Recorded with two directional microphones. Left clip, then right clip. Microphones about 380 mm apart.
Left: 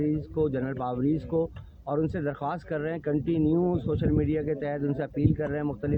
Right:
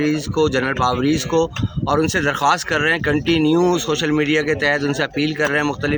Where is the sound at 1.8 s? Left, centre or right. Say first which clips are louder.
Right 11 dB; left.